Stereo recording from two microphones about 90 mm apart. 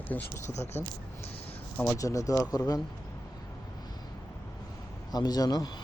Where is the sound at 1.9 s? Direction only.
35° left (ahead or behind).